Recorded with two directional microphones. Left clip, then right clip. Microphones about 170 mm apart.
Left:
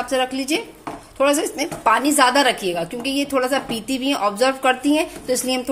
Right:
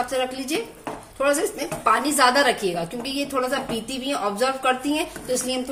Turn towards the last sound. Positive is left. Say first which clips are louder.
# left 4 dB
turn(degrees=55)  # may be behind; listen again after turning